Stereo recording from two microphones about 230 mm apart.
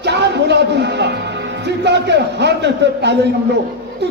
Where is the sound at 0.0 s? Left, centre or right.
Right.